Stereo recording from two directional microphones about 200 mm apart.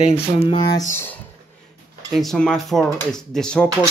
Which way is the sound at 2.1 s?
Centre (ahead or behind).